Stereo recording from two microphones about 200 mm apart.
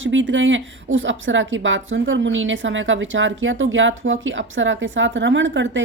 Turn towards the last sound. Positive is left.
turn(degrees=-65)  # may be behind; listen again after turning